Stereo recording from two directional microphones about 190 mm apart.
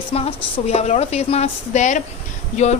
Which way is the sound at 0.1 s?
30° left (ahead or behind).